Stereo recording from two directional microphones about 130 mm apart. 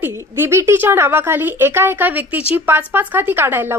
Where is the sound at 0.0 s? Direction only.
20° right (ahead or behind).